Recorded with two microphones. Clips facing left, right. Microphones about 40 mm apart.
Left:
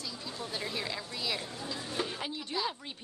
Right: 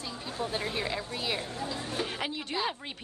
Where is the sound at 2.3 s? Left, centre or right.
Right.